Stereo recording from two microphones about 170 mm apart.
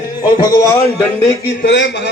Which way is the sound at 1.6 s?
90° left.